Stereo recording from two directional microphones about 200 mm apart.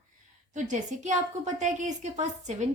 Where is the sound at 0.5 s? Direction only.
35° right (ahead or behind).